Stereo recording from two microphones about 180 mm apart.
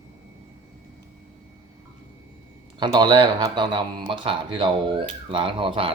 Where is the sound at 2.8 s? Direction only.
25° right (ahead or behind).